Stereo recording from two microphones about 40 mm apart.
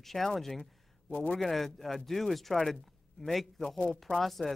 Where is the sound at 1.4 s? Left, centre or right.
Centre.